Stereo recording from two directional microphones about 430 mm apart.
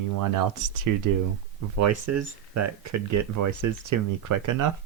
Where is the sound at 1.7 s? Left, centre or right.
Right.